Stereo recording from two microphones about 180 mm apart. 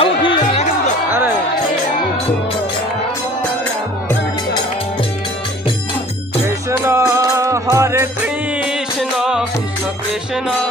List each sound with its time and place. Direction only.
0.0 s music: 30° left (ahead or behind)
6.4 s music: 15° right (ahead or behind)